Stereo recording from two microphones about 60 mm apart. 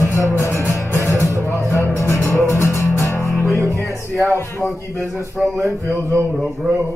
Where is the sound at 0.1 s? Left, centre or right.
Left.